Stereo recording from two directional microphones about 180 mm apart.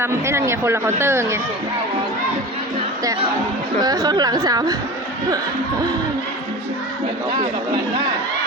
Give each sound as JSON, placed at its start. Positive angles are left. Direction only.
{"t": 0.0, "sound": "speech", "side_deg": -15}
{"t": 3.8, "sound": "a woman's voice", "side_deg": -20}